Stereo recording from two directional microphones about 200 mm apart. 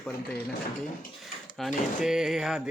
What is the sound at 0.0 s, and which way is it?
Speech, 5° left (ahead or behind).